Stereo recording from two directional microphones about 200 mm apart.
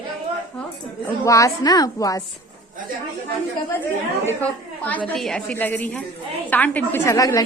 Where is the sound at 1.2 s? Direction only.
15° left (ahead or behind).